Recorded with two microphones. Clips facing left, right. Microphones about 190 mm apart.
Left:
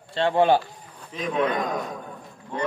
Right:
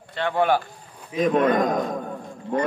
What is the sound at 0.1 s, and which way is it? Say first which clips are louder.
Speech: left 2 dB; 25° left (ahead or behind).